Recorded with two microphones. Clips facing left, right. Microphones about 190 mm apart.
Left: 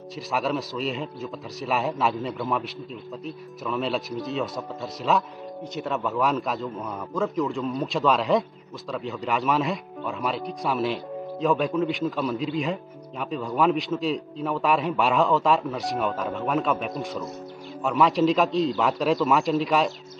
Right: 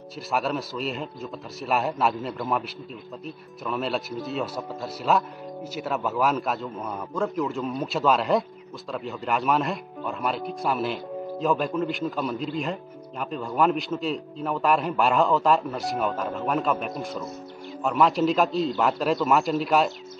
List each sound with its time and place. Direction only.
0.3 s a man's voice: centre (ahead or behind)